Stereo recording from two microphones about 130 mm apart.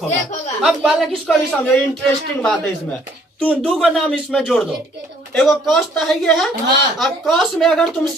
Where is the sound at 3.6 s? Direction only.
Centre (ahead or behind).